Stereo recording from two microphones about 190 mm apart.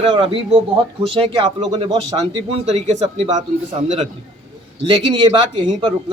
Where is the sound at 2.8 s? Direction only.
35° right (ahead or behind).